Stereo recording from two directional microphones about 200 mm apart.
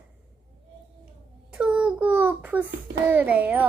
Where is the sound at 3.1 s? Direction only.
10° right (ahead or behind).